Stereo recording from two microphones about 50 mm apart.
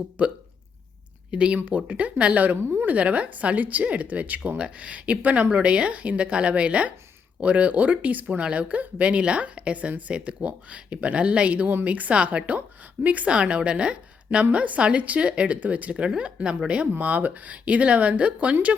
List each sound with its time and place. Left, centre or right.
0.2 s speech: right
1.3 s speech: right
2.6 s a woman's voice: right
2.9 s a woman's voice: right
17.0 s speech: right